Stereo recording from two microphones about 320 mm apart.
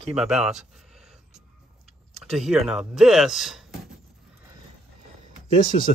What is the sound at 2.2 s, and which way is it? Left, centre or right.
Speech, centre.